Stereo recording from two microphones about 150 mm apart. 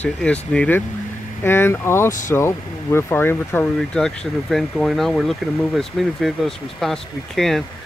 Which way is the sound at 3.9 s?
5° left (ahead or behind).